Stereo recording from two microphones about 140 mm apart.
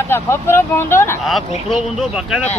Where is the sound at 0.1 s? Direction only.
15° left (ahead or behind).